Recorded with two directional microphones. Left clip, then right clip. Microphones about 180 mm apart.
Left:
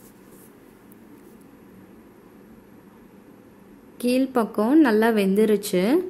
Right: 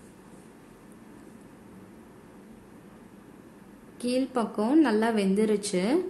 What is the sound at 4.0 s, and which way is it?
A woman's voice, 25° left (ahead or behind).